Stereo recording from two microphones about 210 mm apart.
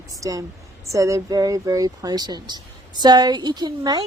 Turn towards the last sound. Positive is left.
turn(degrees=-20)  # may be behind; listen again after turning